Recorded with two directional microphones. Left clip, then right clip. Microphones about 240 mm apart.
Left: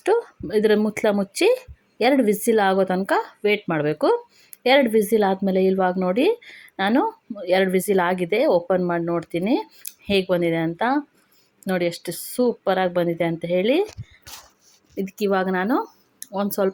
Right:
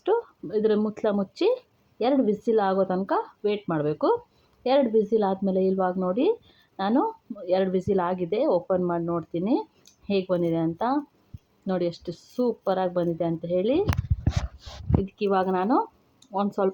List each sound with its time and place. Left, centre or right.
0.0 s speech: left
15.3 s speech: left